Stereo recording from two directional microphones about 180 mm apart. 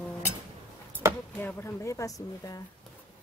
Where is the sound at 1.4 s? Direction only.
15° left (ahead or behind).